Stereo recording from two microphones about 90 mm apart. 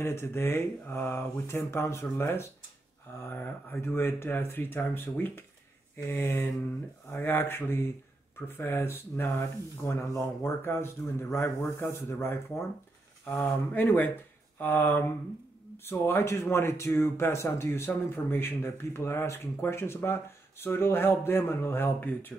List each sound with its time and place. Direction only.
0.0 s speech: 30° left (ahead or behind)